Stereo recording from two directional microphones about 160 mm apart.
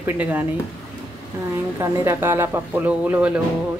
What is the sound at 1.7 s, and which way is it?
Speech, 15° right (ahead or behind).